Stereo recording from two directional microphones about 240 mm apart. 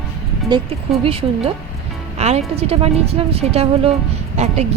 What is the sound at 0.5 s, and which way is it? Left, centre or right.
Speech, centre.